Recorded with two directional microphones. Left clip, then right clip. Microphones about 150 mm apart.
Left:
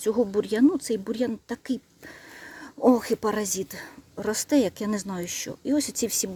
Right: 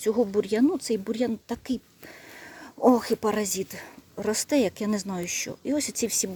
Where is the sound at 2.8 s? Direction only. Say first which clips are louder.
Even; centre (ahead or behind).